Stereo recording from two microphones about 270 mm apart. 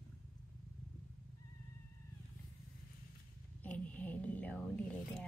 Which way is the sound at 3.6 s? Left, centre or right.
Centre.